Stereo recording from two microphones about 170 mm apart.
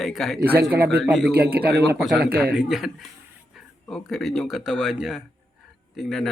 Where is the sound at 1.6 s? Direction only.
70° right (ahead or behind).